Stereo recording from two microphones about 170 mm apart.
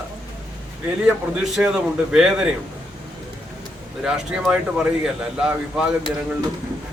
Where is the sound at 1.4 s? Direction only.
5° right (ahead or behind).